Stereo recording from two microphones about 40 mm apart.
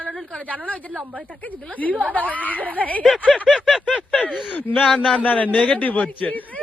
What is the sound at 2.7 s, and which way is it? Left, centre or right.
Speech, left.